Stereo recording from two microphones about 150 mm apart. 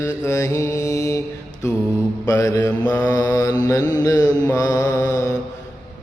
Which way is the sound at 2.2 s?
20° left (ahead or behind).